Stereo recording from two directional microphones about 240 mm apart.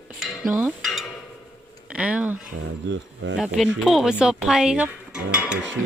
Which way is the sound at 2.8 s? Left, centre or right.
Right.